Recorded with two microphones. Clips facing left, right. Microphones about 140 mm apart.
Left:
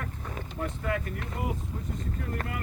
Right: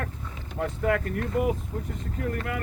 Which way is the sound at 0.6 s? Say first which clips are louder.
Right 6 dB; 65° right (ahead or behind).